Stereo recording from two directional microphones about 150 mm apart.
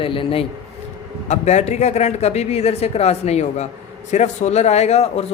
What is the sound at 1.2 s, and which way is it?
Speech, 50° left (ahead or behind).